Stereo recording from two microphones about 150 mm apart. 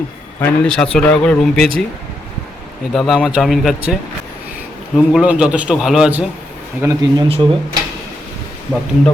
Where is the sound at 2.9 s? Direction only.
Centre (ahead or behind).